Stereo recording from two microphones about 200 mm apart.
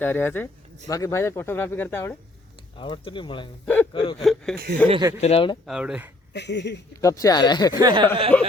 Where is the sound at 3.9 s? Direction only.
25° left (ahead or behind).